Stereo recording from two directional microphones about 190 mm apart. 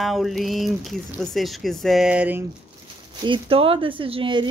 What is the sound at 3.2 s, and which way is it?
Speech, 25° right (ahead or behind).